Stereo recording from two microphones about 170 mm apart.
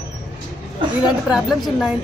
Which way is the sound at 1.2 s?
Centre (ahead or behind).